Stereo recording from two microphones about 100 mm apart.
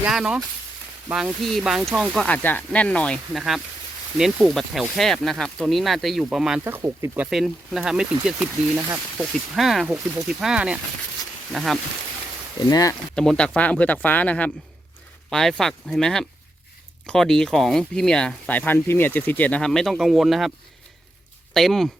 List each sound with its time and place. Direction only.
0.0 s speech: 5° right (ahead or behind)
1.3 s speech: 5° left (ahead or behind)
2.2 s speech: 15° left (ahead or behind)
3.3 s speech: centre (ahead or behind)
6.8 s speech: 25° right (ahead or behind)
7.3 s speech: centre (ahead or behind)
12.5 s speech: 40° left (ahead or behind)
13.1 s speech: 10° left (ahead or behind)
21.5 s speech: 5° left (ahead or behind)